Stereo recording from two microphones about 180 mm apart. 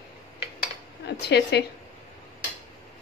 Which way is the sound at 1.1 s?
65° left (ahead or behind).